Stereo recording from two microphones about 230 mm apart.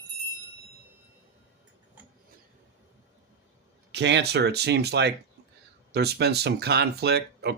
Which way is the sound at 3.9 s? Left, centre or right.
Right.